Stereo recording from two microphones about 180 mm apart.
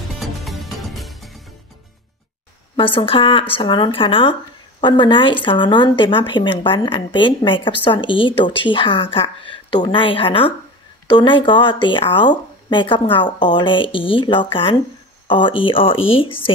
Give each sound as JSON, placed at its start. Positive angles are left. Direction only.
{"t": 0.1, "sound": "music", "side_deg": 0}
{"t": 2.7, "sound": "speech", "side_deg": 30}